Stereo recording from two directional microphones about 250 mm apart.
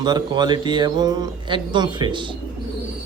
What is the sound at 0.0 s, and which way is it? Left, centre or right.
Speech, centre.